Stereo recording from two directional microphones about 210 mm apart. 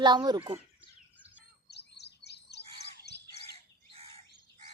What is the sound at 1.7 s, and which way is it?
Chirp, 55° left (ahead or behind).